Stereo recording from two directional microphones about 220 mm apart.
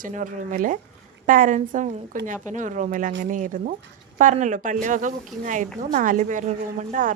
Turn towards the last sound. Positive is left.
turn(degrees=-35)  # may be behind; listen again after turning